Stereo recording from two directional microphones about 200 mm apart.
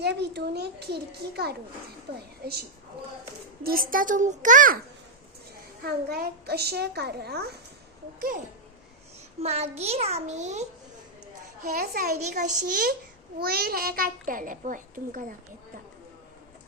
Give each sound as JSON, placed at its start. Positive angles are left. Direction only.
{"t": 0.0, "sound": "a child's voice", "side_deg": -55}
{"t": 5.8, "sound": "a child's voice", "side_deg": -50}
{"t": 9.4, "sound": "a child's voice", "side_deg": -30}
{"t": 11.7, "sound": "a child's voice", "side_deg": -50}